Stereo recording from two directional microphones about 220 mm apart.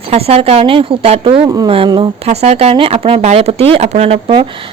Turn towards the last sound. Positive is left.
turn(degrees=-25)  # may be behind; listen again after turning